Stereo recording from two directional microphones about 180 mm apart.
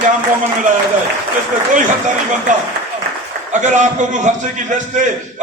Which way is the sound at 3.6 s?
40° right (ahead or behind).